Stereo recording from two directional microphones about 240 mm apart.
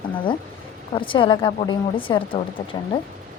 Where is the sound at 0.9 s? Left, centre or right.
Left.